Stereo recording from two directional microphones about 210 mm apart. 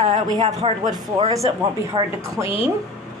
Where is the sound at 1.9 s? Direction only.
15° right (ahead or behind).